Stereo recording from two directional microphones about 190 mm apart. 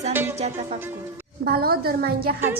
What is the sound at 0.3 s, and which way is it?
Speech, 35° right (ahead or behind).